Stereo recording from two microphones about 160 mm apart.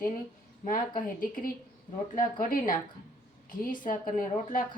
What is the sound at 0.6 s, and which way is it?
A woman's voice, 60° left (ahead or behind).